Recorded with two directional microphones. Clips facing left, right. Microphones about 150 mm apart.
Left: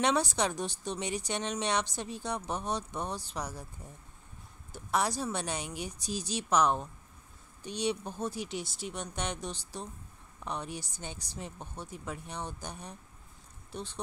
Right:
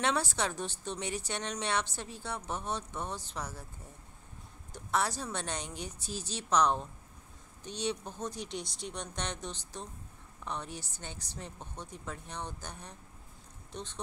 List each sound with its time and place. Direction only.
0.0 s a woman's voice: 15° left (ahead or behind)
4.7 s a woman's voice: 15° left (ahead or behind)